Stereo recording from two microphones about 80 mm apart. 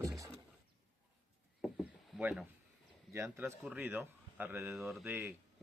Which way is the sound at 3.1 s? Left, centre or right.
Right.